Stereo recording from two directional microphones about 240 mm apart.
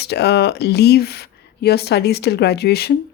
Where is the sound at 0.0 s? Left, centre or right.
Left.